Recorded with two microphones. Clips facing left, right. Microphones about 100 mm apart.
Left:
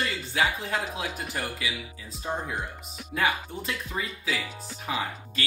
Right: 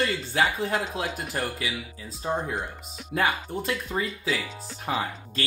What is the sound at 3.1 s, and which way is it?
Speech, 35° right (ahead or behind).